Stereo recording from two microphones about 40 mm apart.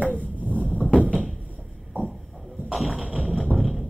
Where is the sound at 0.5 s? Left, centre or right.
Left.